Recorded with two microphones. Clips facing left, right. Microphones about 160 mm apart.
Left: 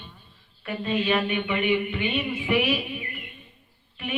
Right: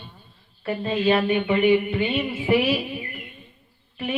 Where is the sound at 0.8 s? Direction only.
35° right (ahead or behind).